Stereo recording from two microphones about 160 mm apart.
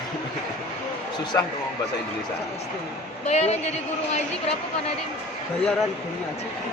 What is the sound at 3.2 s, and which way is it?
Speech, 45° left (ahead or behind).